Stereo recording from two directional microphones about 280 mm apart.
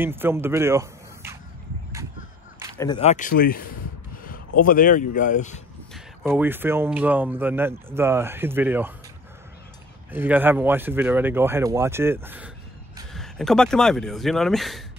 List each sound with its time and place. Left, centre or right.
0.0 s speech: centre
2.8 s speech: centre
5.9 s speech: centre
10.1 s speech: centre